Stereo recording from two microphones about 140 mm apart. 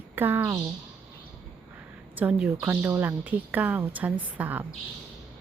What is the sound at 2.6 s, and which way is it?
A woman's voice, 15° right (ahead or behind).